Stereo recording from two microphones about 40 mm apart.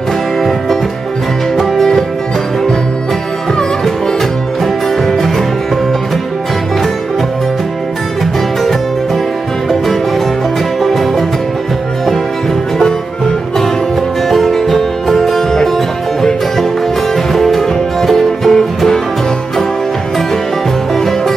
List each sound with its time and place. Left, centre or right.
1.6 s music: centre
10.8 s music: centre
14.3 s music: centre
17.3 s music: centre